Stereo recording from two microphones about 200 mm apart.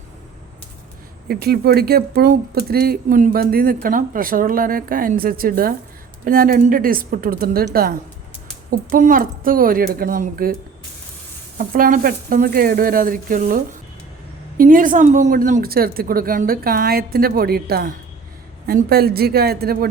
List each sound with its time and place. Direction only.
1.3 s speech: 50° right (ahead or behind)
14.6 s speech: 45° right (ahead or behind)